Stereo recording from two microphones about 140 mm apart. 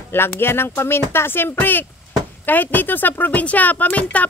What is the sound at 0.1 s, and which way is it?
A woman's voice, 15° left (ahead or behind).